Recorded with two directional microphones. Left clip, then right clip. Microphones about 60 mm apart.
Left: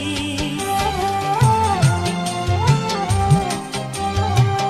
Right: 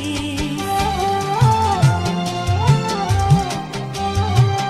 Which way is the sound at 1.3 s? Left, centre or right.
Left.